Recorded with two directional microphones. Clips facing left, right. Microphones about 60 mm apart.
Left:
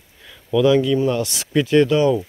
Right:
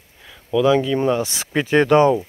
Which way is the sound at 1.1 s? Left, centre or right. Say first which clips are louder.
Left 1 dB; right.